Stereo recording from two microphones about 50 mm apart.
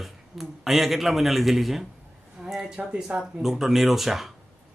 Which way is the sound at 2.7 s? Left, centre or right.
Right.